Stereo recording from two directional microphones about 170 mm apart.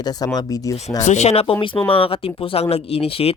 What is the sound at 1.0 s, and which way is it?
Speech, 40° left (ahead or behind).